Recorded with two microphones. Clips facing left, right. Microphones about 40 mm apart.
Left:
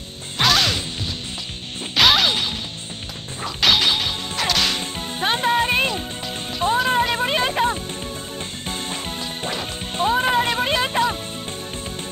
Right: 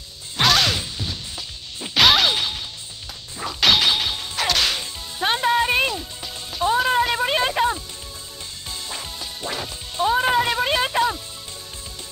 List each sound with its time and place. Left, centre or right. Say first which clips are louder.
0.4 s music: even; centre
3.3 s whip: even; centre
5.2 s music: even; centre
5.9 s music: left 4 dB; left
6.7 s a sound: even; centre
8.6 s music: left 3 dB; left
10.0 s a sound: even; centre